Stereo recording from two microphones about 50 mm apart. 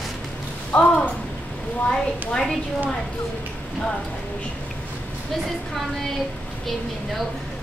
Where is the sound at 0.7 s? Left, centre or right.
Centre.